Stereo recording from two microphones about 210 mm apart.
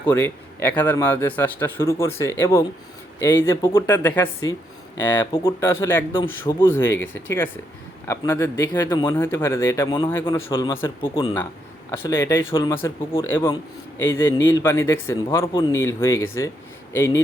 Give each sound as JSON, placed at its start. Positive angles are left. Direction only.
{"t": 0.0, "sound": "speech", "side_deg": 10}
{"t": 5.3, "sound": "speech", "side_deg": 20}
{"t": 5.6, "sound": "speech", "side_deg": 10}
{"t": 11.0, "sound": "speech", "side_deg": 25}